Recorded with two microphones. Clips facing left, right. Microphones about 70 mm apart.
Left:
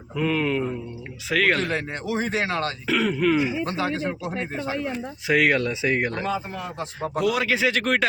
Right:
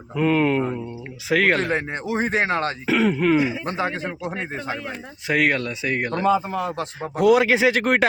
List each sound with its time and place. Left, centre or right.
0.2 s a man's voice: right
1.3 s speech: centre
1.5 s speech: right
2.8 s speech: centre
3.7 s speech: right
5.3 s speech: centre
7.0 s a man's voice: right